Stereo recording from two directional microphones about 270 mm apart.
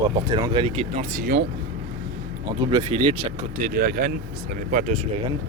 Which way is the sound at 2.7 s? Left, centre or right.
Centre.